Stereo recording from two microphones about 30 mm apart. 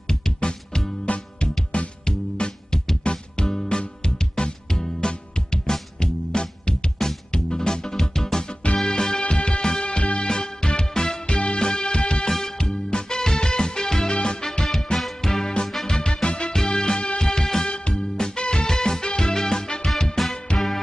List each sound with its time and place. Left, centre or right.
0.4 s music: left
1.1 s music: left
2.0 s music: left
9.2 s music: left
11.2 s music: left
12.3 s music: centre
14.7 s music: centre
15.6 s music: left
17.6 s music: left
18.1 s music: left
18.4 s music: left
18.7 s music: left
20.2 s music: centre